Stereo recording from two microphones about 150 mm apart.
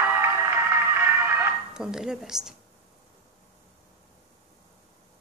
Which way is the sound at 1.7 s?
5° right (ahead or behind).